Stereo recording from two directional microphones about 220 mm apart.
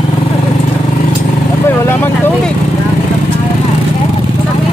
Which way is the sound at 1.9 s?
10° left (ahead or behind).